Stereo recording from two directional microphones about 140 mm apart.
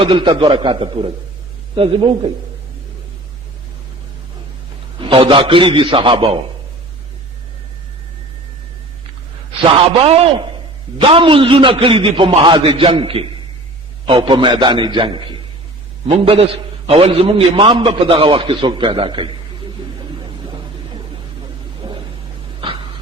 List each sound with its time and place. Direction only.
0.0 s a man's voice: 40° right (ahead or behind)
4.9 s a man's voice: 40° right (ahead or behind)
9.6 s a man's voice: 45° right (ahead or behind)
21.8 s a sound: 30° right (ahead or behind)